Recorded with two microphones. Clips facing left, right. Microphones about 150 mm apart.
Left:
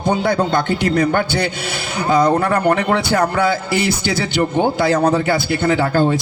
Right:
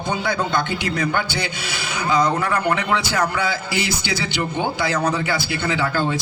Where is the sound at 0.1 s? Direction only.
50° left (ahead or behind).